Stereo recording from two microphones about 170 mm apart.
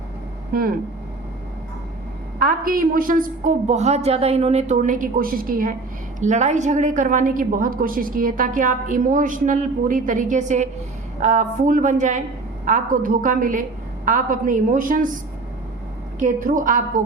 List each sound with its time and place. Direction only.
0.5 s speech: 60° right (ahead or behind)
2.4 s a woman's voice: 55° right (ahead or behind)
6.1 s a woman's voice: 45° right (ahead or behind)
16.1 s a woman's voice: 50° right (ahead or behind)